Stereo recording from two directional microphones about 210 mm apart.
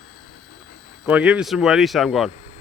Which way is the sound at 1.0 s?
5° right (ahead or behind).